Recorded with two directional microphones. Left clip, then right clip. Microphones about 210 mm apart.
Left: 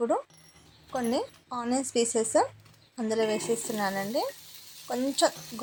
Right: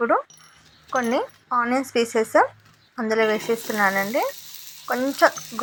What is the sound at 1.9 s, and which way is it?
Speech, 10° left (ahead or behind).